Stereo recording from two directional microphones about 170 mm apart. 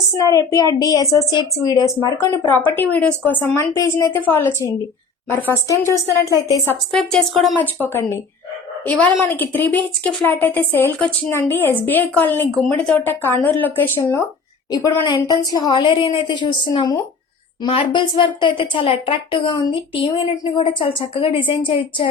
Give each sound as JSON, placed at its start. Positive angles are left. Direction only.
{"t": 0.2, "sound": "a woman's voice", "side_deg": 20}
{"t": 6.9, "sound": "speech", "side_deg": 5}
{"t": 7.8, "sound": "a woman's voice", "side_deg": 15}